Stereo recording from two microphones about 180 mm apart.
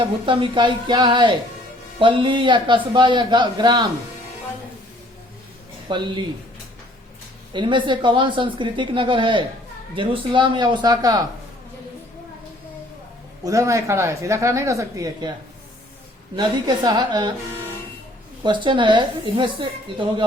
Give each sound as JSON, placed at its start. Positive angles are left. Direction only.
{"t": 0.0, "sound": "speech", "side_deg": -30}
{"t": 5.9, "sound": "speech", "side_deg": -25}
{"t": 7.5, "sound": "speech", "side_deg": -25}
{"t": 13.4, "sound": "a woman's voice", "side_deg": -15}
{"t": 16.3, "sound": "speech", "side_deg": -25}
{"t": 18.4, "sound": "speech", "side_deg": -25}